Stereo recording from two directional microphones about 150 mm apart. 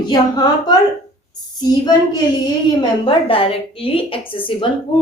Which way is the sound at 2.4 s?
25° left (ahead or behind).